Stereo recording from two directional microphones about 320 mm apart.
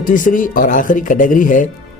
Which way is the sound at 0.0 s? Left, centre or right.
Left.